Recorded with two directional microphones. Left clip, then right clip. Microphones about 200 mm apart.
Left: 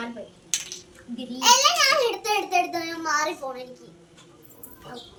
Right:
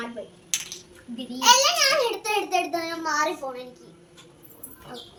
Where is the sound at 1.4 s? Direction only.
20° left (ahead or behind).